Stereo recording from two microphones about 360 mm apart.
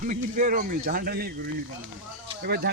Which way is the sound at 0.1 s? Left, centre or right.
Right.